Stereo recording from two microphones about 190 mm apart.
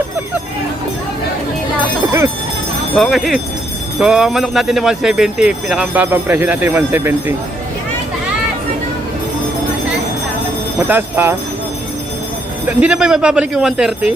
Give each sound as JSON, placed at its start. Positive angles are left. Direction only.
{"t": 2.9, "sound": "speech", "side_deg": 0}
{"t": 10.8, "sound": "speech", "side_deg": -10}
{"t": 12.6, "sound": "speech", "side_deg": -5}